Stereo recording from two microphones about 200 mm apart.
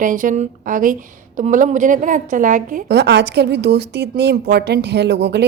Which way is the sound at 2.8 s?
55° right (ahead or behind).